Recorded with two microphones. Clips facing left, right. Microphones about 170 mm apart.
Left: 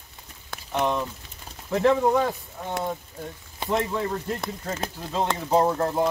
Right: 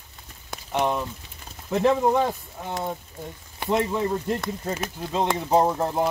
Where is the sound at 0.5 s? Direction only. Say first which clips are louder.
Right 1 dB; 10° right (ahead or behind).